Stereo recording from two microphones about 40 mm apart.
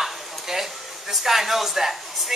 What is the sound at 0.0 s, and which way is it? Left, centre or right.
Speech, centre.